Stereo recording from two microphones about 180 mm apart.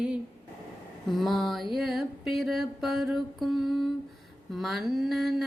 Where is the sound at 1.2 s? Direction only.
Centre (ahead or behind).